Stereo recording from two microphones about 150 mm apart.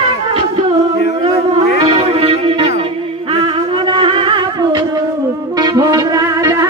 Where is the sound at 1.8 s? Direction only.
40° right (ahead or behind).